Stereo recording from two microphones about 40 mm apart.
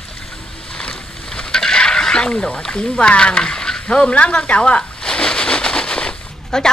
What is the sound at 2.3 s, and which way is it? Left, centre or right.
Speech, left.